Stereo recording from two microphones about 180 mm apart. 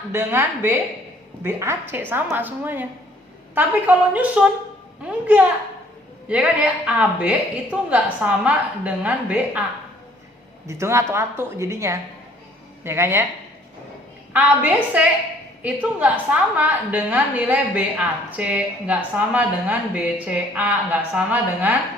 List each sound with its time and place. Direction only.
0.1 s a woman's voice: 10° right (ahead or behind)
10.7 s a woman's voice: 15° right (ahead or behind)
14.3 s a woman's voice: 10° right (ahead or behind)